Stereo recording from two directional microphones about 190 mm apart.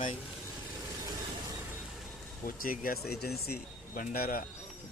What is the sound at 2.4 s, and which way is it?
Speech, 45° left (ahead or behind).